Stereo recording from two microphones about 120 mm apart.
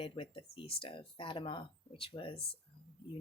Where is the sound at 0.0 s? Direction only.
50° left (ahead or behind).